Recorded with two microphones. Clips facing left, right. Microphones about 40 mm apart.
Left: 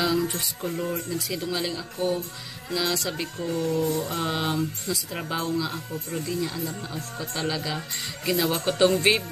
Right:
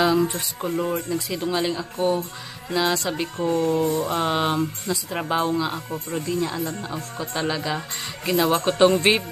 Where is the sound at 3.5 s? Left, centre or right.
Right.